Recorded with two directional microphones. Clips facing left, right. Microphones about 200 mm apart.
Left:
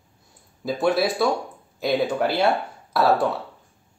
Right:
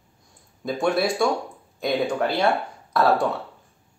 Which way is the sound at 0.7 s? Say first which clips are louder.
Left 1 dB; centre (ahead or behind).